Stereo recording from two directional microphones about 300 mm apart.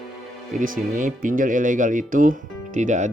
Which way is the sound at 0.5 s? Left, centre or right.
Right.